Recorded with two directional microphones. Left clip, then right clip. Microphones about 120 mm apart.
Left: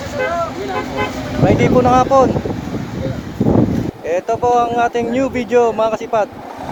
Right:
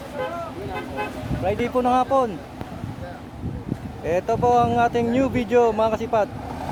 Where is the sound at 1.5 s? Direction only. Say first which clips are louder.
Left 8 dB; 40° right (ahead or behind).